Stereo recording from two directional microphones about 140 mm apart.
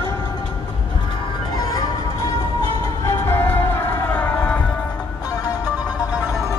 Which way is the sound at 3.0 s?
15° left (ahead or behind).